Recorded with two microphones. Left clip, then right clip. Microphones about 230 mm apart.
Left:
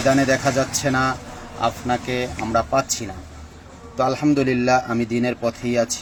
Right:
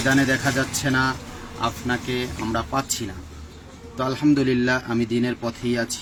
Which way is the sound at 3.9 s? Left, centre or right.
Centre.